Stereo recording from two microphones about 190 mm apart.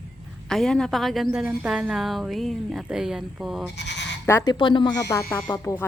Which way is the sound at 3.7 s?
65° left (ahead or behind).